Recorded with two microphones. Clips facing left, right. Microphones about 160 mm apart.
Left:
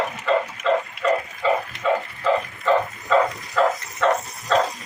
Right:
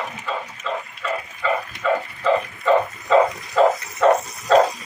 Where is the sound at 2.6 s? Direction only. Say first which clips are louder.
Right 2 dB; 10° right (ahead or behind).